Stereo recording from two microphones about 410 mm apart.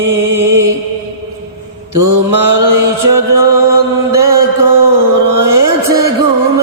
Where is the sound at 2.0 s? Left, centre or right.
Right.